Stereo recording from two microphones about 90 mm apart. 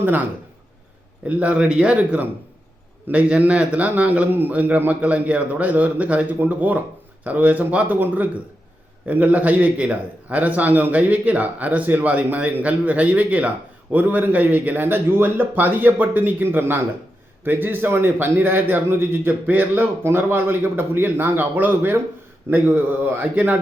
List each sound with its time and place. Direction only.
1.3 s a man's voice: 15° right (ahead or behind)